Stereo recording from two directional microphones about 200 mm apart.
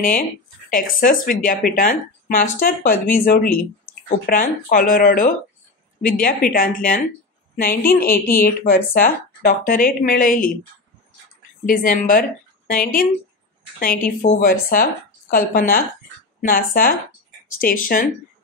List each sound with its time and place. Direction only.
0.0 s speech: 40° left (ahead or behind)
11.6 s speech: 45° left (ahead or behind)
14.2 s speech: 45° left (ahead or behind)